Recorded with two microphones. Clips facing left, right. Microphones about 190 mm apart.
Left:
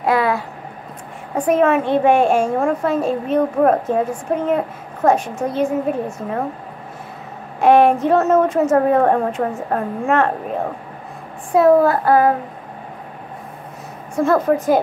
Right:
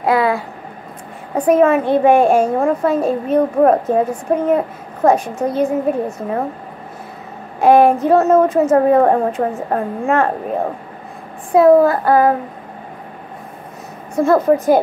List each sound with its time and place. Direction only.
0.1 s a sound: 30° right (ahead or behind)
1.3 s a woman's voice: 35° right (ahead or behind)
7.6 s a woman's voice: 35° right (ahead or behind)
11.5 s a woman's voice: 35° right (ahead or behind)
14.1 s speech: 35° right (ahead or behind)